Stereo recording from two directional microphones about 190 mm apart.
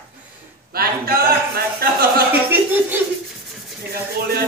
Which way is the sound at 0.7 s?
55° right (ahead or behind).